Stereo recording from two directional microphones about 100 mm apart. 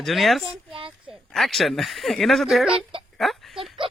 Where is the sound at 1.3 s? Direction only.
Centre (ahead or behind).